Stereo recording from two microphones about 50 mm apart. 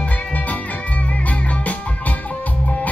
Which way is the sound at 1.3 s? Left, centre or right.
Left.